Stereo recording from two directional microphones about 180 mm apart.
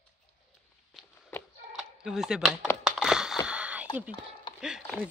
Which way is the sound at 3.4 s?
5° right (ahead or behind).